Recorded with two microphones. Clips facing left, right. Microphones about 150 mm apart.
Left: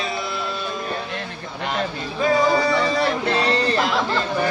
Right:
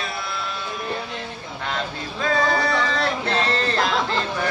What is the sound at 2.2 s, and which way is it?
Music, 15° left (ahead or behind).